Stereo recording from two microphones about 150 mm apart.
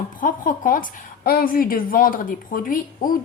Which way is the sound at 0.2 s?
65° left (ahead or behind).